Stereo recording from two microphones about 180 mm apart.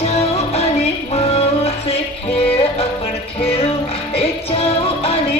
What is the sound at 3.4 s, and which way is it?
Music, 35° left (ahead or behind).